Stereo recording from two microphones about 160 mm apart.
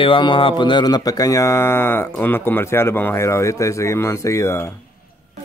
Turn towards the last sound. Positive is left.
turn(degrees=15)  # may be behind; listen again after turning